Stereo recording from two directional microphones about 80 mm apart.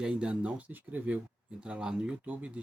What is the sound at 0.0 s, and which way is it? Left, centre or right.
Speech, centre.